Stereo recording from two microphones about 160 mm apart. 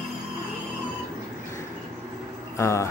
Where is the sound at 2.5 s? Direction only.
15° left (ahead or behind).